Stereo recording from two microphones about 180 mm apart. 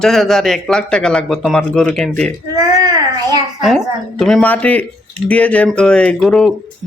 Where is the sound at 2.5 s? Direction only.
20° right (ahead or behind).